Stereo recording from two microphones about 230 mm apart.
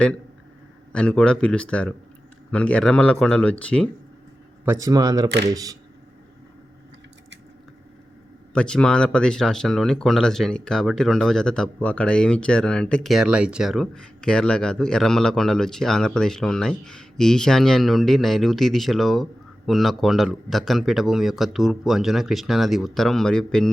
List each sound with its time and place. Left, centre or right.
0.9 s speech: centre
4.6 s speech: centre
8.5 s speech: centre